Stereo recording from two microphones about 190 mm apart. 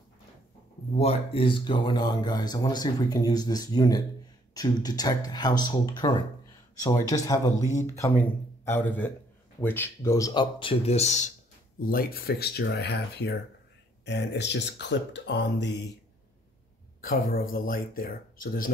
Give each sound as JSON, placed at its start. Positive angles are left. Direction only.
{"t": 0.9, "sound": "speech", "side_deg": 30}
{"t": 11.8, "sound": "speech", "side_deg": 50}
{"t": 17.0, "sound": "speech", "side_deg": 50}